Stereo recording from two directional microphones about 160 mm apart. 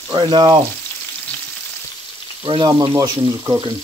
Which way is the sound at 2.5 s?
30° right (ahead or behind).